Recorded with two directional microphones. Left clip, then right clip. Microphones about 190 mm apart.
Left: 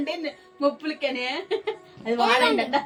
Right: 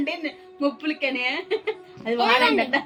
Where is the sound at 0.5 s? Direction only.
15° right (ahead or behind).